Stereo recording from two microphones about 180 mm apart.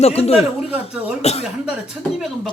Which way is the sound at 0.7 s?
5° right (ahead or behind).